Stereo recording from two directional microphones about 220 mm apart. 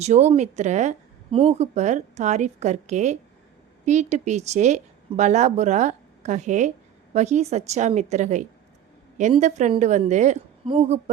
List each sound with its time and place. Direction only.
0.0 s a woman's voice: 30° right (ahead or behind)